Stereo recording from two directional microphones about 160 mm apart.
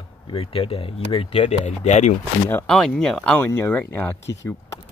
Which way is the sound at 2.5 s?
5° left (ahead or behind).